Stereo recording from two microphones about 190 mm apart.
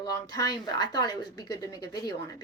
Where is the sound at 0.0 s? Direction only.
20° left (ahead or behind).